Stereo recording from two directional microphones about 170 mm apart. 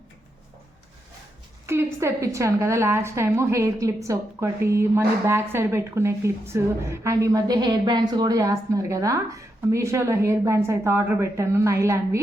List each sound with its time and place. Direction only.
1.6 s a woman's voice: 15° right (ahead or behind)